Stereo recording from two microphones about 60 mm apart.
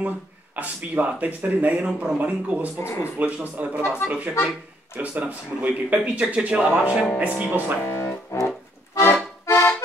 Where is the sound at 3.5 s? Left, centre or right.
Right.